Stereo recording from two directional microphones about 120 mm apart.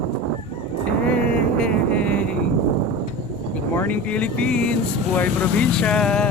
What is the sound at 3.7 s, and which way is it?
Speech, 15° left (ahead or behind).